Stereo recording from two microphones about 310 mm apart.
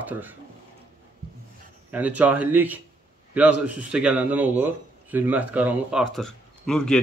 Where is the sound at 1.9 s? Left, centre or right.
Centre.